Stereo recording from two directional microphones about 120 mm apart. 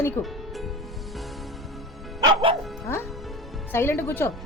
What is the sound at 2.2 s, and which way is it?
Bow-wow, 45° right (ahead or behind).